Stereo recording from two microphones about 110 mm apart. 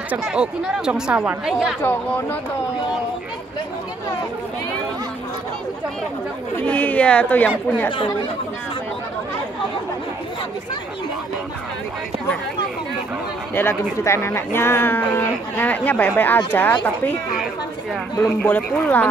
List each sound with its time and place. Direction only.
0.1 s speech: 10° right (ahead or behind)
1.8 s speech: 20° left (ahead or behind)
6.6 s speech: 10° left (ahead or behind)
14.0 s speech: 25° left (ahead or behind)
18.4 s speech: 15° left (ahead or behind)